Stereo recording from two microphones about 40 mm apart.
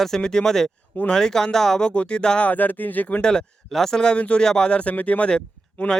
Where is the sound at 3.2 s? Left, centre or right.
Left.